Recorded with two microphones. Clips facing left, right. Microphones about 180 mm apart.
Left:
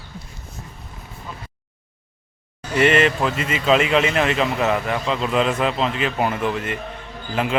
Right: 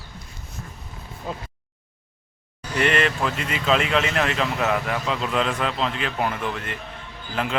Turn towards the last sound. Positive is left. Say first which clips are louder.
# left 4 dB
turn(degrees=5)  # may be behind; listen again after turning